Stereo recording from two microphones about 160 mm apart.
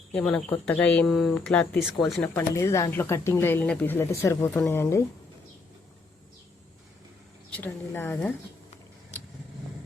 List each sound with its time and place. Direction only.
0.1 s speech: 5° left (ahead or behind)
2.3 s speech: 20° left (ahead or behind)
7.5 s speech: 10° left (ahead or behind)